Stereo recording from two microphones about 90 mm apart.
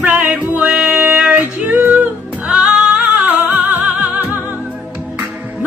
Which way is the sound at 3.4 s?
20° right (ahead or behind).